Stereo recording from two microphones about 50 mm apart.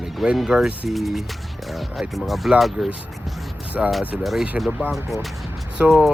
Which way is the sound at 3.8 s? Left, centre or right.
Centre.